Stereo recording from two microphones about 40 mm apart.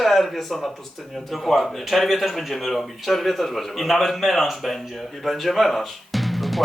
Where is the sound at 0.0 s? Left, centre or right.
Centre.